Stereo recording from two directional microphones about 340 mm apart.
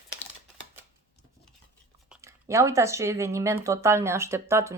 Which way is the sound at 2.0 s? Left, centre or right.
Centre.